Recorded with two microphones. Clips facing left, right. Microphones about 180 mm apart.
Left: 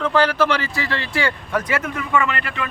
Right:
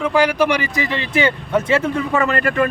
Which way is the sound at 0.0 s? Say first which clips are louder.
Right 2 dB; 10° right (ahead or behind).